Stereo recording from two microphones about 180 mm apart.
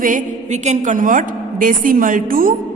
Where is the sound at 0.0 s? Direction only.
45° right (ahead or behind).